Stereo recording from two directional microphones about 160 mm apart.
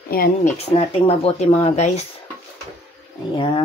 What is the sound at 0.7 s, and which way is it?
Speech, 35° left (ahead or behind).